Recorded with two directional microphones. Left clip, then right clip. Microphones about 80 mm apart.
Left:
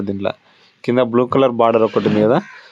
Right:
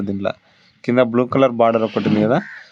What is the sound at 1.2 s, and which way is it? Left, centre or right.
Speech, left.